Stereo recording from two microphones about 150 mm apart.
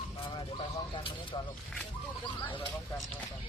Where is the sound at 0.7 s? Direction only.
30° left (ahead or behind).